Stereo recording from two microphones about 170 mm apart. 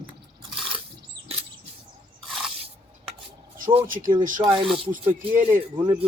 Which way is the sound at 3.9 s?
55° right (ahead or behind).